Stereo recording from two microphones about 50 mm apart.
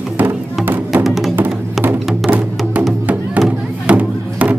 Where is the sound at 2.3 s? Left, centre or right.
Right.